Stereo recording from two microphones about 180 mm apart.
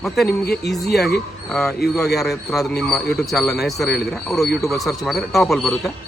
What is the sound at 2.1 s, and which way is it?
A man's voice, centre (ahead or behind).